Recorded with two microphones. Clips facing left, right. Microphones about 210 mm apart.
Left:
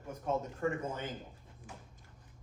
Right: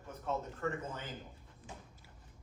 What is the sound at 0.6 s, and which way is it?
Speech, 30° left (ahead or behind).